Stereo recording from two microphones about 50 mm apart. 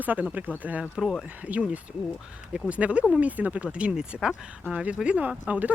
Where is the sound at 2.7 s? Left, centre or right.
Right.